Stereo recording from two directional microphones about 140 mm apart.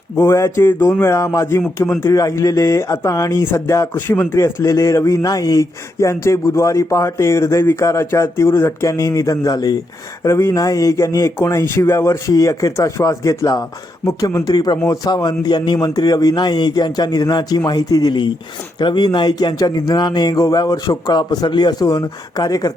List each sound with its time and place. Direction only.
0.2 s a man's voice: 20° left (ahead or behind)